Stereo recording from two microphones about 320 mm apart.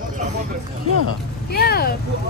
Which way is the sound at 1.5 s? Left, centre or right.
Left.